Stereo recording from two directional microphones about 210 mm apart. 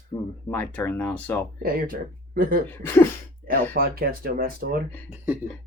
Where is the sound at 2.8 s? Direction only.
10° left (ahead or behind).